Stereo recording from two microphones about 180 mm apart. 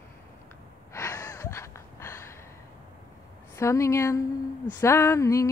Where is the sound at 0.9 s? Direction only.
15° left (ahead or behind).